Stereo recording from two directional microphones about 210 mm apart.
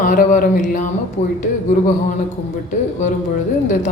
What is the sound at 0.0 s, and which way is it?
Speech, 40° left (ahead or behind).